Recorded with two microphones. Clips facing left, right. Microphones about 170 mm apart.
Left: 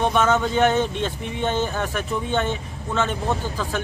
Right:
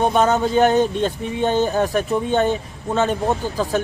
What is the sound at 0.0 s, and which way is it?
Speech, 40° right (ahead or behind).